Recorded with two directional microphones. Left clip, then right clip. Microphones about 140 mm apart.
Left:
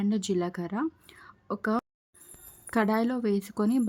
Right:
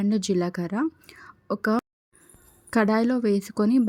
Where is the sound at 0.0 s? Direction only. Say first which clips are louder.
Right 4 dB; 15° right (ahead or behind).